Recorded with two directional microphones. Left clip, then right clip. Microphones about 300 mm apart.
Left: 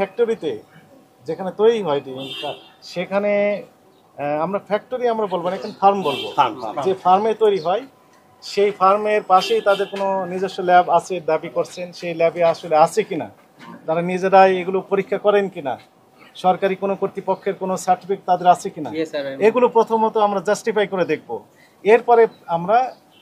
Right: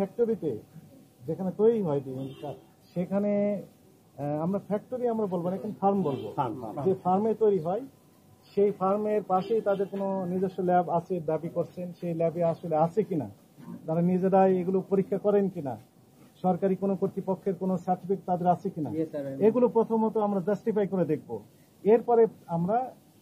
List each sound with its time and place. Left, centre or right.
0.0 s speech: centre
19.7 s speech: left
20.0 s speech: centre